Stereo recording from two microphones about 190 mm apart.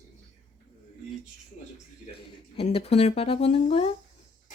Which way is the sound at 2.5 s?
30° left (ahead or behind).